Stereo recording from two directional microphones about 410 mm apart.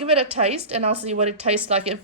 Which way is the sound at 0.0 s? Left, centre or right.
Centre.